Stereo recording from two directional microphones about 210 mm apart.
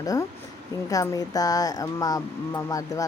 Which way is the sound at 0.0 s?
15° left (ahead or behind).